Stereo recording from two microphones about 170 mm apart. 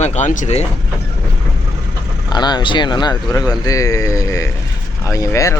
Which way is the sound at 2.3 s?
25° left (ahead or behind).